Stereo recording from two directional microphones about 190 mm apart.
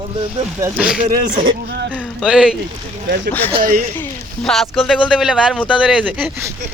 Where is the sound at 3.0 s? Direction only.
55° right (ahead or behind).